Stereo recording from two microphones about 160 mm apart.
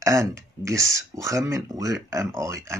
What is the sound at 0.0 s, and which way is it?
A man's voice, 20° right (ahead or behind).